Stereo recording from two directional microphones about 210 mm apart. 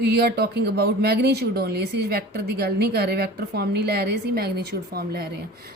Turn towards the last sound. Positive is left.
turn(degrees=-50)  # may be behind; listen again after turning